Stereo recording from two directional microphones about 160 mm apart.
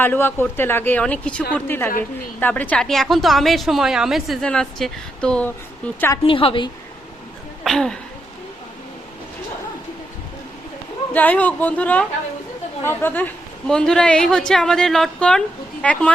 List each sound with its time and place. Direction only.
0.0 s a woman's voice: 15° left (ahead or behind)
6.2 s a woman's voice: 35° left (ahead or behind)
7.6 s a woman's voice: centre (ahead or behind)
11.1 s a woman's voice: 10° left (ahead or behind)